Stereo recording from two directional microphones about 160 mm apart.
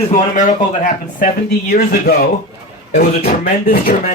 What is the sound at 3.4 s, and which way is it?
Speech, 65° left (ahead or behind).